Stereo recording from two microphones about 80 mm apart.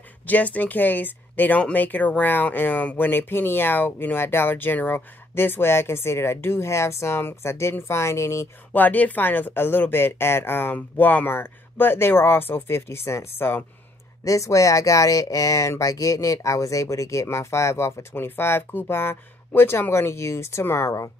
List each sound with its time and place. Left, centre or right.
0.3 s speech: centre; by 8.5 s left
8.7 s speech: left
14.2 s speech: left